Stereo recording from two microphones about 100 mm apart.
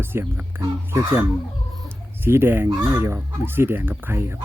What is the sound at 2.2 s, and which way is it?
Speech, 25° right (ahead or behind).